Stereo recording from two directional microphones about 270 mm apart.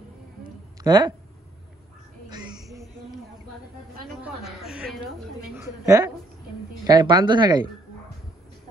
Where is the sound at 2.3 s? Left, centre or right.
Centre.